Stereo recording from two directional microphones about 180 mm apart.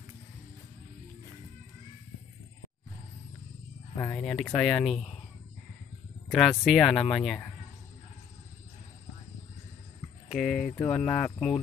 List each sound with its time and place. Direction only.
3.9 s a sound: 15° left (ahead or behind)
4.2 s speech: 5° left (ahead or behind)
6.2 s speech: 5° left (ahead or behind)
10.3 s speech: centre (ahead or behind)